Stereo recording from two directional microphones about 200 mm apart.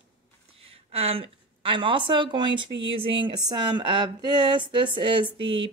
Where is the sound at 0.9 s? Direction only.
30° right (ahead or behind).